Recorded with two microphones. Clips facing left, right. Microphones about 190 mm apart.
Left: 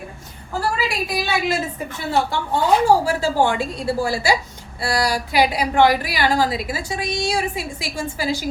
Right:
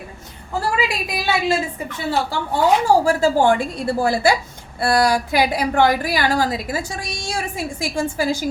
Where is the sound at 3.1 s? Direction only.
50° right (ahead or behind).